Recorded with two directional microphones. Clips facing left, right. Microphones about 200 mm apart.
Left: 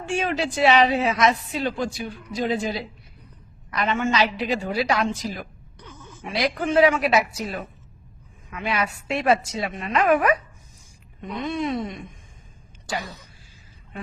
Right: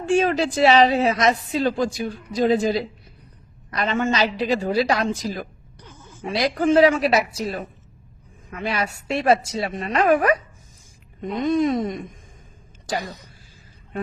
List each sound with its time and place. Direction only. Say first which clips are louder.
0.1 s speech: right 6 dB; 35° right (ahead or behind)
5.8 s a sound: left 2 dB; 15° right (ahead or behind)
6.1 s speech: right 2 dB; 30° right (ahead or behind)